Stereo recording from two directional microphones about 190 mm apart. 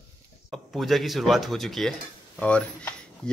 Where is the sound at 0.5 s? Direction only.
Centre (ahead or behind).